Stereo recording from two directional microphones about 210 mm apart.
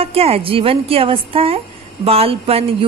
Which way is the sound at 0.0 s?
30° right (ahead or behind).